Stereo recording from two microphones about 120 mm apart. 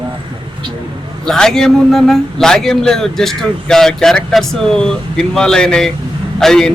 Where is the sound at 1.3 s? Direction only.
5° left (ahead or behind).